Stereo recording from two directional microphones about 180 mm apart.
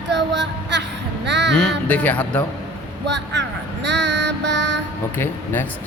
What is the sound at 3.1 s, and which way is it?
Child singing, 75° right (ahead or behind).